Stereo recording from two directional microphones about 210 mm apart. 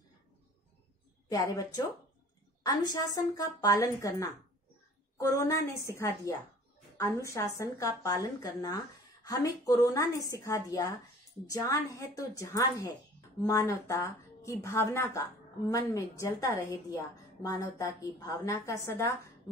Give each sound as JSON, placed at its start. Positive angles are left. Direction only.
{"t": 1.3, "sound": "a woman's voice", "side_deg": 15}